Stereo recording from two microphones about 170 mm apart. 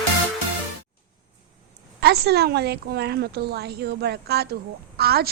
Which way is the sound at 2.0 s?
70° right (ahead or behind).